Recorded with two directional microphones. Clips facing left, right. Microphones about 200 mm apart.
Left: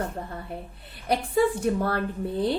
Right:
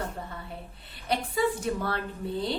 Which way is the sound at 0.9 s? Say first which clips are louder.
Left 5 dB; 55° left (ahead or behind).